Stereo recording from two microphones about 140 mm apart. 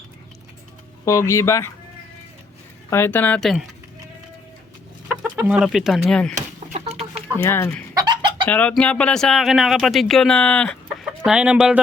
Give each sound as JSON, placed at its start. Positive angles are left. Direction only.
{"t": 1.0, "sound": "speech", "side_deg": 20}
{"t": 2.9, "sound": "speech", "side_deg": 15}
{"t": 5.5, "sound": "speech", "side_deg": -5}
{"t": 6.3, "sound": "a sound", "side_deg": -50}
{"t": 7.3, "sound": "speech", "side_deg": 20}
{"t": 7.9, "sound": "chicken", "side_deg": -30}
{"t": 8.4, "sound": "speech", "side_deg": 10}
{"t": 11.3, "sound": "speech", "side_deg": -5}